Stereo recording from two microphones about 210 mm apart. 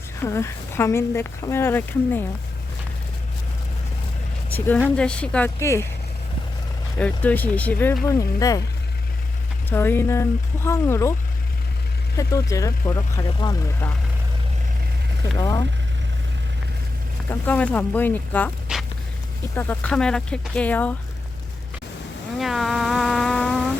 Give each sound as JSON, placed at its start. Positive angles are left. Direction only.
{"t": 0.2, "sound": "speech", "side_deg": 15}
{"t": 4.5, "sound": "a woman's voice", "side_deg": 10}
{"t": 7.0, "sound": "speech", "side_deg": 5}
{"t": 9.6, "sound": "speech", "side_deg": 10}
{"t": 12.1, "sound": "speech", "side_deg": 15}
{"t": 15.4, "sound": "speech", "side_deg": 20}
{"t": 17.4, "sound": "speech", "side_deg": 5}
{"t": 19.5, "sound": "speech", "side_deg": 10}
{"t": 22.4, "sound": "a sound", "side_deg": 0}